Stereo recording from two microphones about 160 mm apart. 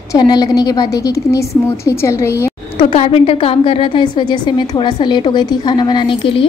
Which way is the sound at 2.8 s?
35° left (ahead or behind).